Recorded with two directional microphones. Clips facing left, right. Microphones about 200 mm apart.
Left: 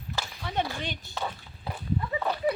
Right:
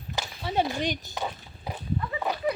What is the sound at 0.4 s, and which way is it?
Speech, 25° right (ahead or behind).